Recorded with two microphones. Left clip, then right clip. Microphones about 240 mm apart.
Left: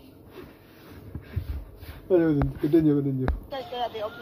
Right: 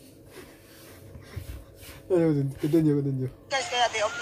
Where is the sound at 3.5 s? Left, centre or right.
Right.